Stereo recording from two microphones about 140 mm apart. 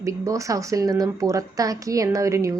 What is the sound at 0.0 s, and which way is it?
A woman's voice, 20° right (ahead or behind).